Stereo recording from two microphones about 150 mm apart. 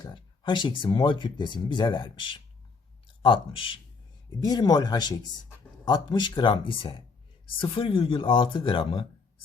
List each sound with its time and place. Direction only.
0.0 s speech: 30° left (ahead or behind)